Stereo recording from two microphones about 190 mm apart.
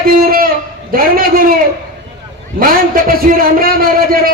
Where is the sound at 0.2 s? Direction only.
50° right (ahead or behind).